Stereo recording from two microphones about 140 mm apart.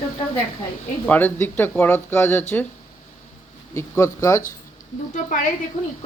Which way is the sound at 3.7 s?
20° left (ahead or behind).